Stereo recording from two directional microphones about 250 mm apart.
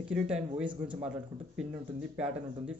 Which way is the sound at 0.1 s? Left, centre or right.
Centre.